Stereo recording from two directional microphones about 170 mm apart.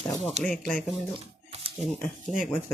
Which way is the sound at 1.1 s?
35° right (ahead or behind).